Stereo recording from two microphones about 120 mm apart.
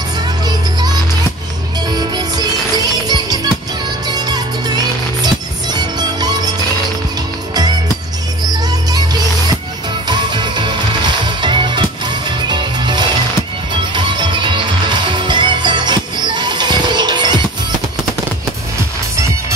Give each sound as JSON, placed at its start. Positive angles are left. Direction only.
{"t": 2.0, "sound": "music", "side_deg": -35}
{"t": 8.9, "sound": "music", "side_deg": -35}